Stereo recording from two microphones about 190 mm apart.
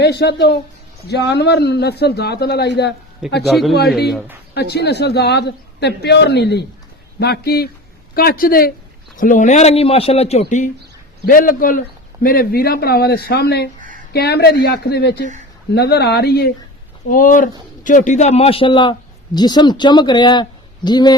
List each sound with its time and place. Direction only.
0.0 s a man's voice: 60° left (ahead or behind)
3.4 s speech: centre (ahead or behind)
4.5 s a man's voice: 60° left (ahead or behind)
17.1 s a woman's voice: 45° left (ahead or behind); by 21.2 s 20° left (ahead or behind)